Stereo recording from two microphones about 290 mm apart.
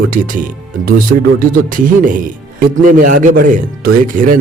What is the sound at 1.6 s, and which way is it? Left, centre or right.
Speech, right.